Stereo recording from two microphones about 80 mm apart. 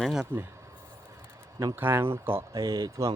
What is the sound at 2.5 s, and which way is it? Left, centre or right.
Speech, right.